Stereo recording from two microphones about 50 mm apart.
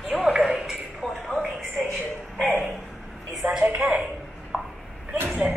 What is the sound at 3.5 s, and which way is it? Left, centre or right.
Speech, right.